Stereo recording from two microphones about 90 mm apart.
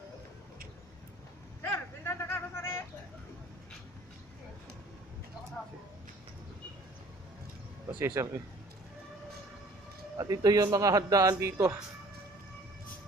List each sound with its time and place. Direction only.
1.6 s vehicle: 25° left (ahead or behind)
8.0 s speech: 30° right (ahead or behind)
10.1 s speech: 45° right (ahead or behind)